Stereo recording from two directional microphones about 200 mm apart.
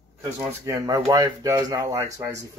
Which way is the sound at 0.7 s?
15° right (ahead or behind).